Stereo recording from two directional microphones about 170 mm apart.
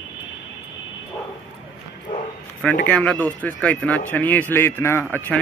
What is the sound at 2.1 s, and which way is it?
Speech, 30° left (ahead or behind).